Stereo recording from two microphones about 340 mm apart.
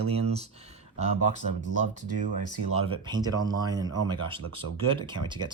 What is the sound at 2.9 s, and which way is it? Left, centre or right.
Speech, centre.